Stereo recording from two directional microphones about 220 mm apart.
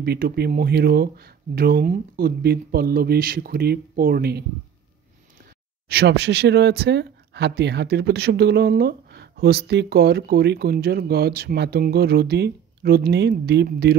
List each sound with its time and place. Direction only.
0.0 s speech: 45° right (ahead or behind)
5.9 s speech: 50° right (ahead or behind)